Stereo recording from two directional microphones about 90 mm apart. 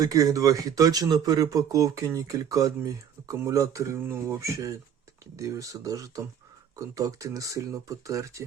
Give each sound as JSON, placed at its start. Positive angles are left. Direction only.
{"t": 0.0, "sound": "speech", "side_deg": -40}